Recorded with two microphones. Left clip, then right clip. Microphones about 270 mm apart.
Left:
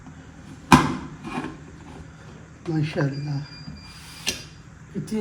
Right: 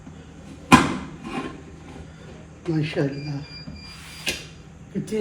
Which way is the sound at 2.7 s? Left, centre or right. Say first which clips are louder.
Right 2 dB; left.